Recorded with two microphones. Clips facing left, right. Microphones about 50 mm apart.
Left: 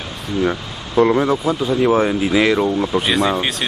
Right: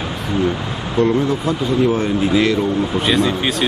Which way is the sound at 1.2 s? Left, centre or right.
Centre.